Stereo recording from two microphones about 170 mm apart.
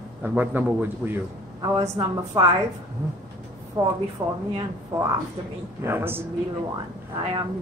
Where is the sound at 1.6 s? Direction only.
30° right (ahead or behind).